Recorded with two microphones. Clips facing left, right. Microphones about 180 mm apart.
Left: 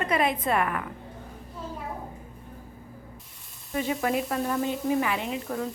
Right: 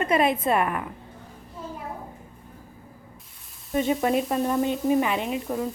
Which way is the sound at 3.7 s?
25° right (ahead or behind).